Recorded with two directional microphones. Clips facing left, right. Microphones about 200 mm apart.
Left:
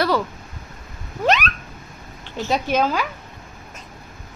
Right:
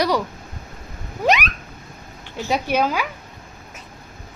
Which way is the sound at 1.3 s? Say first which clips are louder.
Even; 10° right (ahead or behind).